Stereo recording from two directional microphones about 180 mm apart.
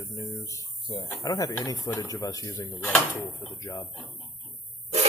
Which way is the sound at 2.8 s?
5° left (ahead or behind).